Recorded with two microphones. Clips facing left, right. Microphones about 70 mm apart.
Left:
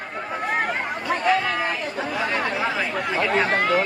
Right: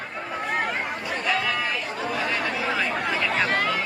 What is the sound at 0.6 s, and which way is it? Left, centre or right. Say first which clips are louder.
Chatter: left 2 dB; left.